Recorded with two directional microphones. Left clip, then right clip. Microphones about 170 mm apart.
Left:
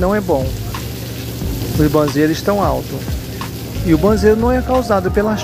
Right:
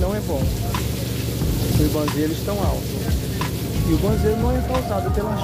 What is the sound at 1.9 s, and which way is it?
Speech, 30° left (ahead or behind).